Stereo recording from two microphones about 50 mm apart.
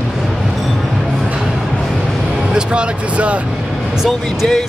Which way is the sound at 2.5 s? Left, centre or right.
Centre.